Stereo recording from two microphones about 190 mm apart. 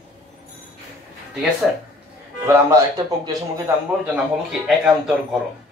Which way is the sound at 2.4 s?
15° right (ahead or behind).